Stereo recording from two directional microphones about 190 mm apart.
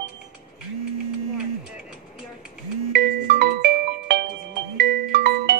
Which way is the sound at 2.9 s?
60° right (ahead or behind).